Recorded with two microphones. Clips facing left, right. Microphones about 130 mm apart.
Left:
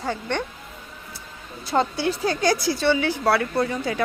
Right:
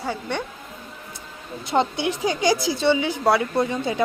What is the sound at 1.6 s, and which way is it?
A woman's voice, 20° right (ahead or behind).